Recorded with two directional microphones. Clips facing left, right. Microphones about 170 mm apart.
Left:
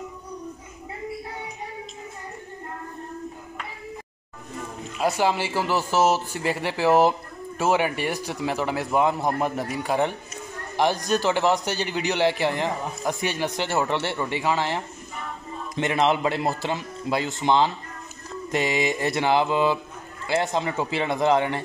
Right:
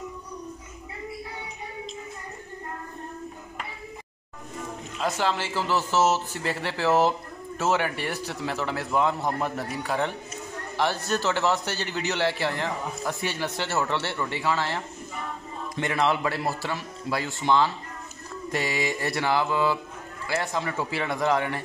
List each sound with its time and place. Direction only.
4.9 s a man's voice: 10° left (ahead or behind)